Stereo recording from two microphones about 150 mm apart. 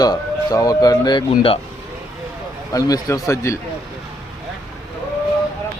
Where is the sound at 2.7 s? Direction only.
25° left (ahead or behind).